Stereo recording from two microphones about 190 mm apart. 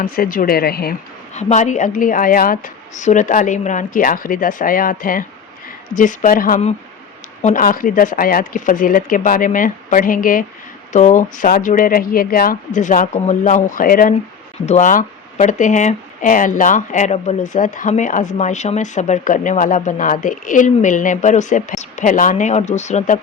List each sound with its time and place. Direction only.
0.0 s a woman's voice: 50° left (ahead or behind)
1.3 s a woman's voice: 35° left (ahead or behind)